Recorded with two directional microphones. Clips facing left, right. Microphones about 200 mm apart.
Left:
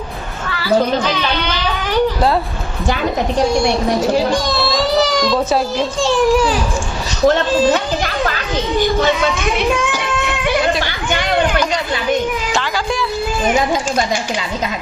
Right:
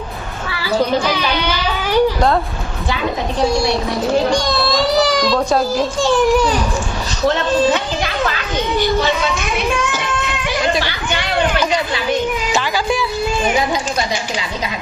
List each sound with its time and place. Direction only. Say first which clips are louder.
0.6 s a child's voice: left 2 dB; 10° right (ahead or behind)
4.3 s a child's voice: even; centre (ahead or behind)
10.8 s chatter: left 1 dB; 50° left (ahead or behind)
12.5 s music: right 1 dB; 5° right (ahead or behind)